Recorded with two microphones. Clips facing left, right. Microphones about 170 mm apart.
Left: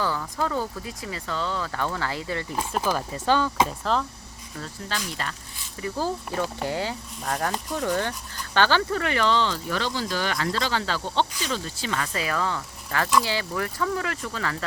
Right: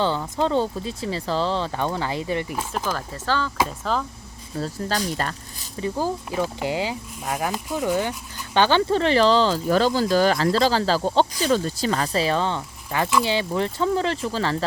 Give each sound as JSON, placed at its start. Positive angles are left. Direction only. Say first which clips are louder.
{"t": 0.0, "sound": "speech", "louder": "right 5 dB", "side_deg": -25}
{"t": 2.6, "sound": "speech", "louder": "left 1 dB", "side_deg": 0}
{"t": 2.9, "sound": "speech", "louder": "left 4 dB", "side_deg": 15}
{"t": 3.7, "sound": "speech", "louder": "even", "side_deg": 0}
{"t": 4.5, "sound": "speech", "louder": "right 8 dB", "side_deg": -35}
{"t": 5.8, "sound": "speech", "louder": "right 3 dB", "side_deg": -15}